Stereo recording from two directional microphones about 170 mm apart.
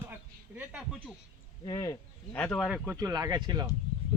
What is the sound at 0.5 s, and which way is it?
Speech, 5° right (ahead or behind).